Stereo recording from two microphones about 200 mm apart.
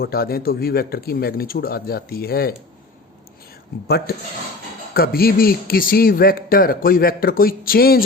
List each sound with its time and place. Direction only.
0.0 s a man's voice: 50° left (ahead or behind)
3.8 s a man's voice: 55° left (ahead or behind)